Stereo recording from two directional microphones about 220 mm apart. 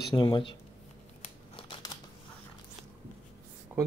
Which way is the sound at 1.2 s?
25° left (ahead or behind).